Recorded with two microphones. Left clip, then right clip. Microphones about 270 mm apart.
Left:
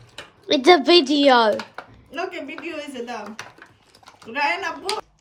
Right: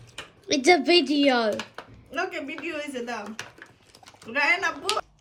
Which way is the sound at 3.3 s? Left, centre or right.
Centre.